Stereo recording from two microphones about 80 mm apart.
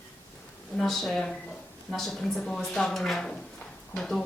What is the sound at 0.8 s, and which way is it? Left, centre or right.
Speech, centre.